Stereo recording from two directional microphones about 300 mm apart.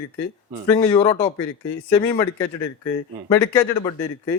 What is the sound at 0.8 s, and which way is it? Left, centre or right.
Speech, centre.